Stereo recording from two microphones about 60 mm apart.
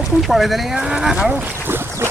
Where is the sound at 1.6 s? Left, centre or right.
Right.